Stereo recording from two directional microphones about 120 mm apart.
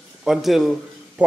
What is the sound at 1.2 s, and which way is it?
Speech, 10° right (ahead or behind).